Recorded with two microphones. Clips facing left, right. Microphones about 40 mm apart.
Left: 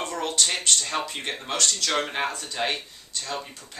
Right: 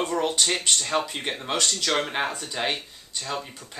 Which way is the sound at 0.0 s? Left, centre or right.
Centre.